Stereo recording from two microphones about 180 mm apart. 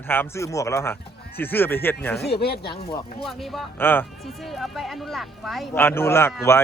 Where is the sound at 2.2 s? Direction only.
65° left (ahead or behind).